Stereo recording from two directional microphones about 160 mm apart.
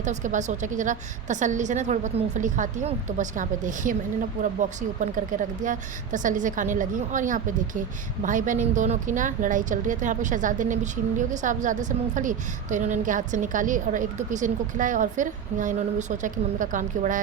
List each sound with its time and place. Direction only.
0.0 s a woman's voice: 50° right (ahead or behind)